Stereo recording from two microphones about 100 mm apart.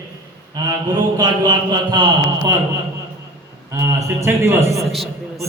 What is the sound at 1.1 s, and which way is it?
Speech, 40° right (ahead or behind).